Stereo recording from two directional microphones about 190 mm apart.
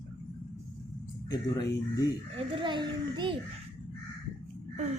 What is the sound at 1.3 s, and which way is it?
Speech, 20° left (ahead or behind).